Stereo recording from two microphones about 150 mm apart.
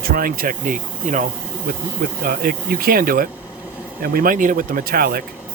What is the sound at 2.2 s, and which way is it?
Speech, 70° right (ahead or behind).